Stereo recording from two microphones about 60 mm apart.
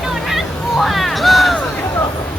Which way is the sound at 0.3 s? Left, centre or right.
Centre.